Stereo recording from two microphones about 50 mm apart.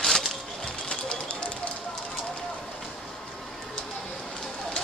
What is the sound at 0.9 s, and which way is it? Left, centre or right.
Run, centre.